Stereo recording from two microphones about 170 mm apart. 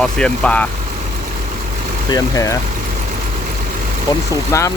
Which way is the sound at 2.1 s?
20° left (ahead or behind).